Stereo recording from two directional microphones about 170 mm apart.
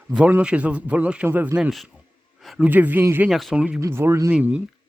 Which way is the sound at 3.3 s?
Centre (ahead or behind).